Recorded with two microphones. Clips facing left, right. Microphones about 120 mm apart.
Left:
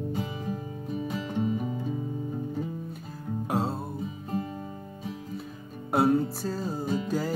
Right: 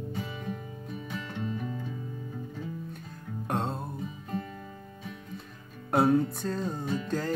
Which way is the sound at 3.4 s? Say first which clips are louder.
Left 2 dB; 5° left (ahead or behind).